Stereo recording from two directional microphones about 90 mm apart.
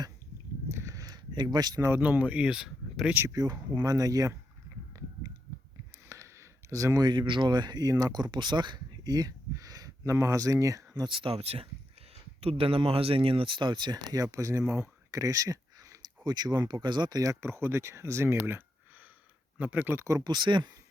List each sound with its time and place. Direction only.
0.7 s a sound: 35° right (ahead or behind)
1.8 s speech: 20° right (ahead or behind); by 3.1 s 5° right (ahead or behind)
3.2 s speech: 40° right (ahead or behind)
6.1 s a sound: 35° right (ahead or behind)
7.1 s speech: 60° right (ahead or behind); by 11.1 s 40° right (ahead or behind)
11.1 s speech: 80° right
12.5 s speech: 90° right; by 17.3 s 45° right (ahead or behind)
17.4 s speech: 30° right (ahead or behind)
20.2 s speech: 55° right (ahead or behind)